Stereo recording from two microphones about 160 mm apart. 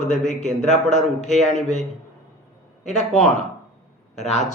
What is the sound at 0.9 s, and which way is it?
Speech, 50° left (ahead or behind).